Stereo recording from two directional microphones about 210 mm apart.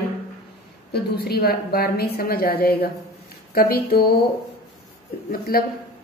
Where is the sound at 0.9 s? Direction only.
50° left (ahead or behind).